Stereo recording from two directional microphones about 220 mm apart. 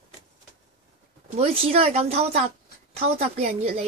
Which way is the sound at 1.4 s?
25° right (ahead or behind).